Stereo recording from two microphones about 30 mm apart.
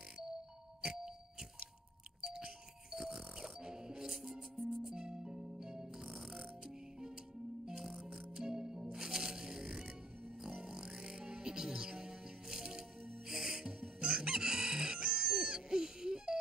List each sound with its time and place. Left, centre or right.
2.2 s a sound: centre
3.0 s music: centre
7.6 s music: centre
13.3 s crowing: centre